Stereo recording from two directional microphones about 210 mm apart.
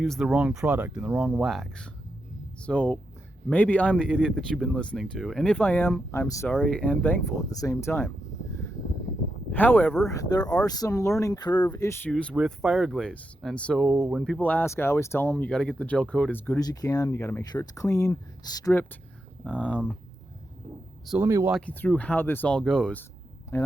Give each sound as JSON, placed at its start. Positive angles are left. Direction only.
{"t": 0.0, "sound": "speech", "side_deg": 0}
{"t": 6.5, "sound": "speech", "side_deg": 0}
{"t": 9.6, "sound": "speech", "side_deg": 10}
{"t": 12.1, "sound": "speech", "side_deg": 0}
{"t": 21.1, "sound": "speech", "side_deg": -10}
{"t": 21.5, "sound": "speech", "side_deg": 5}